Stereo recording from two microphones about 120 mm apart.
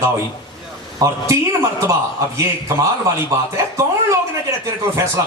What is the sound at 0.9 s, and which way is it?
A man's voice, 25° right (ahead or behind).